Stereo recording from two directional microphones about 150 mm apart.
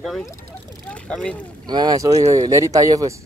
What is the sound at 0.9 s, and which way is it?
Vehicle, 10° left (ahead or behind).